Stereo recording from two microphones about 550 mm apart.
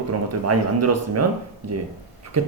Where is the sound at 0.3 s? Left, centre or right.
Right.